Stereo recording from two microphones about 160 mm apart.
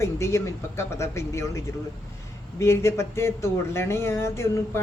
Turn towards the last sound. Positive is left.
turn(degrees=15)  # may be behind; listen again after turning